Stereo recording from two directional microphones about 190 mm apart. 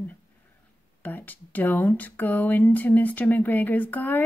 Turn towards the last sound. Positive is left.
turn(degrees=10)  # may be behind; listen again after turning